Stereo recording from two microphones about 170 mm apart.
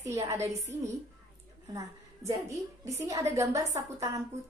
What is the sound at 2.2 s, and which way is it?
A woman's voice, 20° right (ahead or behind).